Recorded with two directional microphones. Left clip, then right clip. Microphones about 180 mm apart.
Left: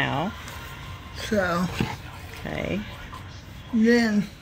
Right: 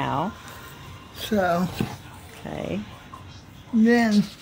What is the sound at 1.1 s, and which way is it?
Speech, 60° right (ahead or behind).